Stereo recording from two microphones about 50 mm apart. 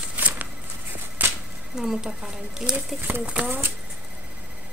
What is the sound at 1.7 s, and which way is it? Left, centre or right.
Speech, centre.